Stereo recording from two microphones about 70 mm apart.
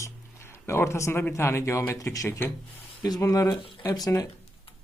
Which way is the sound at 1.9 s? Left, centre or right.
Left.